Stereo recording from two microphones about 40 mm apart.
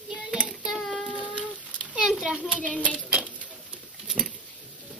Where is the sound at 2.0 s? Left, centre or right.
Centre.